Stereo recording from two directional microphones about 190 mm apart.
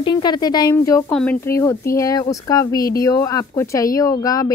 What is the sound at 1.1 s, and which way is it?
A woman's voice, 5° left (ahead or behind).